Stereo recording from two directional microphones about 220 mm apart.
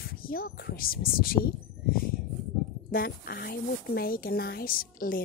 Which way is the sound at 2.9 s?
45° left (ahead or behind).